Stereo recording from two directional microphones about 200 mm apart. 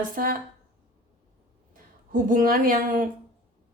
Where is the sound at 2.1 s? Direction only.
40° right (ahead or behind).